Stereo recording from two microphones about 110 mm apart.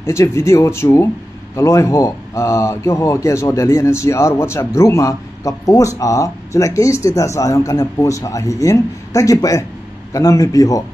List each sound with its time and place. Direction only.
0.0 s speech: 25° left (ahead or behind)